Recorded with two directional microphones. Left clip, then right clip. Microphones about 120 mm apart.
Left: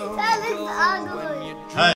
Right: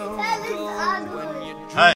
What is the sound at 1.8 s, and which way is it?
Speech, 20° left (ahead or behind).